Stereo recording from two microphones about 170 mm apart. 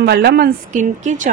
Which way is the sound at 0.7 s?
45° right (ahead or behind).